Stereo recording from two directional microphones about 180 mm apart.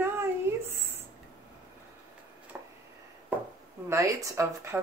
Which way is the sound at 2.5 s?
5° right (ahead or behind).